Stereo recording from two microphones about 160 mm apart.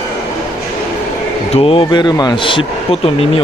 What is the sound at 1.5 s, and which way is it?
Speech, 35° left (ahead or behind).